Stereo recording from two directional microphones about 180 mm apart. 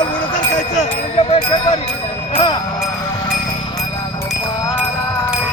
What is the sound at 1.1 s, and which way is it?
Music, 30° left (ahead or behind).